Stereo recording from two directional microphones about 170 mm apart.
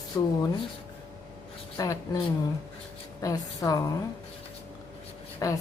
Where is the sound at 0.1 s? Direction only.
15° left (ahead or behind).